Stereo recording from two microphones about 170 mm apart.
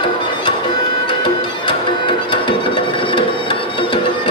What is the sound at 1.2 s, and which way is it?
Music, 30° left (ahead or behind).